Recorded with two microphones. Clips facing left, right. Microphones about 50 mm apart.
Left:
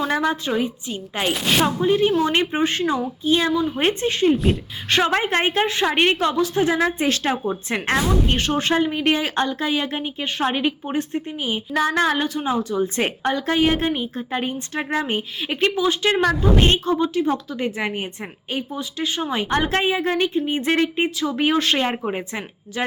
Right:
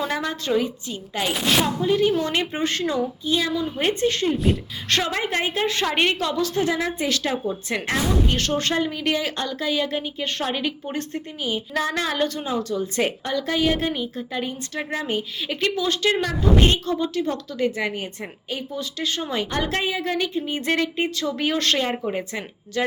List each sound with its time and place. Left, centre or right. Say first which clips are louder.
0.1 s a woman's voice: left 2 dB; centre
1.3 s speech: left 1 dB; centre
1.6 s a woman's voice: left 2 dB; left
3.2 s a woman's voice: left 7 dB; left
5.0 s a woman's voice: left 5 dB; left
5.6 s a woman's voice: left 3 dB; centre; by 7.9 s left
8.4 s a woman's voice: left 3 dB; centre
12.2 s speech: right 1 dB; centre
12.5 s a woman's voice: left 3 dB; left
19.5 s a woman's voice: left 8 dB; left